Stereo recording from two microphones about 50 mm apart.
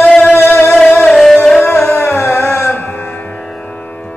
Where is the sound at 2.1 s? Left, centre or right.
Left.